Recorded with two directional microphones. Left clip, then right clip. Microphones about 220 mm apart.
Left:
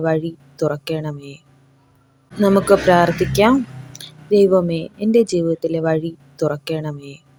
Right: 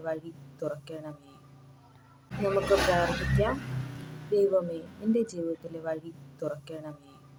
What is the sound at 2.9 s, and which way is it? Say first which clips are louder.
Speech: left 13 dB; 40° left (ahead or behind).